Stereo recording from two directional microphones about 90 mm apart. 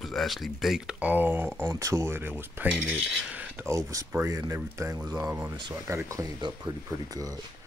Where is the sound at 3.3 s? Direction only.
20° right (ahead or behind).